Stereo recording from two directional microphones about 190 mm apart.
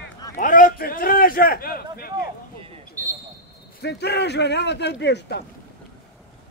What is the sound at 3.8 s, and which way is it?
A man's voice, 60° left (ahead or behind).